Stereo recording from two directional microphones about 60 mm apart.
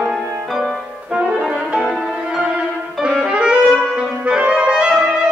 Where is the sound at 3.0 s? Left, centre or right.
Centre.